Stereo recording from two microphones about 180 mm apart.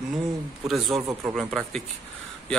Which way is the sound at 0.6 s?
Centre (ahead or behind).